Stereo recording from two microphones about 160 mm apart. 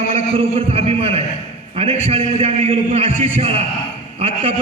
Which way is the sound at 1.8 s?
40° right (ahead or behind).